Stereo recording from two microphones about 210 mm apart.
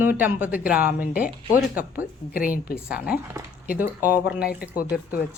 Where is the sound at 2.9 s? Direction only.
5° right (ahead or behind).